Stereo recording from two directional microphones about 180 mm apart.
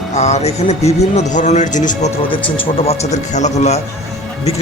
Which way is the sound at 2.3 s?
30° left (ahead or behind).